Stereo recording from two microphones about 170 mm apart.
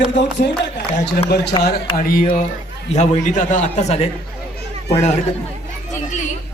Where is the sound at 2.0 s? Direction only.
55° left (ahead or behind).